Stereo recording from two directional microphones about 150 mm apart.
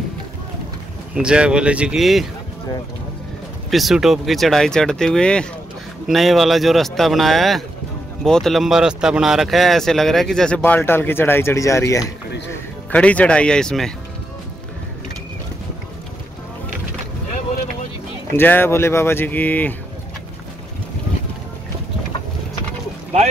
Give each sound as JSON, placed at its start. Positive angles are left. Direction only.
{"t": 1.1, "sound": "speech", "side_deg": -5}
{"t": 3.7, "sound": "speech", "side_deg": 0}
{"t": 12.9, "sound": "speech", "side_deg": 10}
{"t": 18.3, "sound": "speech", "side_deg": 15}